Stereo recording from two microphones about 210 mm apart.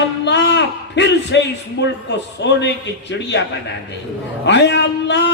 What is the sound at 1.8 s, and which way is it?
A man's voice, 55° left (ahead or behind).